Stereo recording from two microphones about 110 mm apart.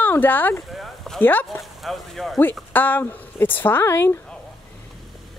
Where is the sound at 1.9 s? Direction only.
Centre (ahead or behind).